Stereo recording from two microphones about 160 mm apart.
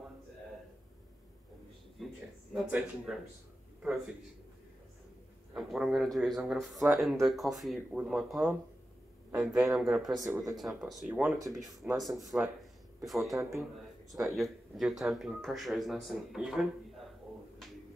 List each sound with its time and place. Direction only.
2.0 s a sound: centre (ahead or behind)
2.5 s speech: 5° right (ahead or behind)
5.5 s speech: centre (ahead or behind)
10.2 s speech: 20° right (ahead or behind)
10.6 s speech: 5° right (ahead or behind)